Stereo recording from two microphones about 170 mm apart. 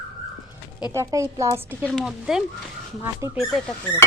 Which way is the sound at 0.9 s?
20° right (ahead or behind).